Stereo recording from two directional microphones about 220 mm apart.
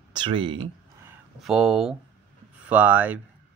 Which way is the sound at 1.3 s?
Centre (ahead or behind).